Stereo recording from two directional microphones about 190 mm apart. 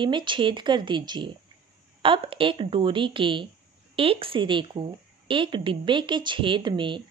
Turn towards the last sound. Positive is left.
turn(degrees=-25)  # may be behind; listen again after turning